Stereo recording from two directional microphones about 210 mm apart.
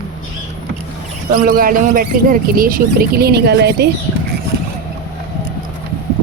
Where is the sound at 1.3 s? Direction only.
40° right (ahead or behind).